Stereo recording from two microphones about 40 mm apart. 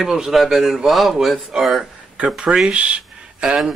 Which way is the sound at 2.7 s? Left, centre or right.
Right.